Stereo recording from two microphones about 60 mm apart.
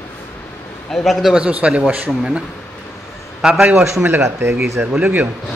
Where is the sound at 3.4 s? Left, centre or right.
Centre.